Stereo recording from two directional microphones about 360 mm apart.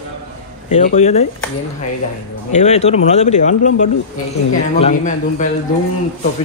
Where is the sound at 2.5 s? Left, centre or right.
Centre.